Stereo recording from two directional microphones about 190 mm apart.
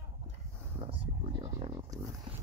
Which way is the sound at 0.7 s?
30° right (ahead or behind).